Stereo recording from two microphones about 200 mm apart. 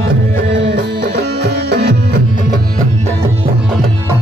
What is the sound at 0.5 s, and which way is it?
Music, 60° right (ahead or behind).